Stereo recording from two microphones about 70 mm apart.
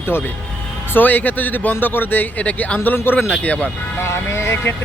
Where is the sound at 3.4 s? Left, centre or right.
Centre.